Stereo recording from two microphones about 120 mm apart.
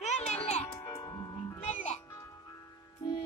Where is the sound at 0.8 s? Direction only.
25° left (ahead or behind).